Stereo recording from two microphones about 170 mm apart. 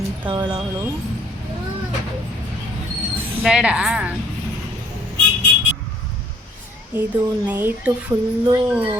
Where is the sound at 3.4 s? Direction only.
5° right (ahead or behind).